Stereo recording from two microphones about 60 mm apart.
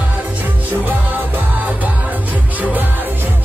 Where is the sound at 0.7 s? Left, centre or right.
Right.